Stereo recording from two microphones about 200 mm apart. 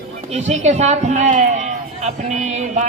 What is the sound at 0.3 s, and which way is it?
A man's voice, 35° right (ahead or behind).